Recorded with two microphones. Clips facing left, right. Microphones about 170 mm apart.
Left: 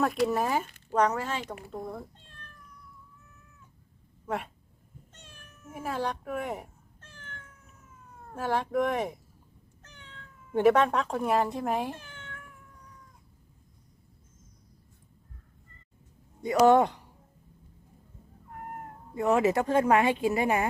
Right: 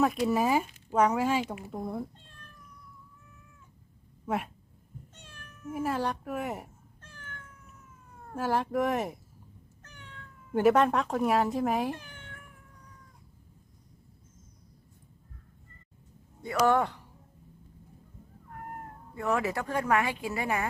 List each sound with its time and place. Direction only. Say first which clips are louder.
0.3 s speech: right 2 dB; 5° right (ahead or behind)
4.3 s speech: right 2 dB; 5° right (ahead or behind)
5.6 s speech: right 2 dB; centre (ahead or behind)
8.4 s speech: even; centre (ahead or behind)
9.8 s cat: right 1 dB; 10° right (ahead or behind)
10.5 s speech: left 1 dB; centre (ahead or behind)
11.9 s cat: even; 10° right (ahead or behind)
16.4 s a woman's voice: left 5 dB; 20° left (ahead or behind)
19.1 s a woman's voice: left 6 dB; 20° left (ahead or behind)